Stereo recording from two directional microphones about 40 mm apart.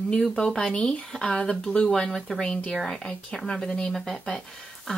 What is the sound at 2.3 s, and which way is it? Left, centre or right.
Speech, left.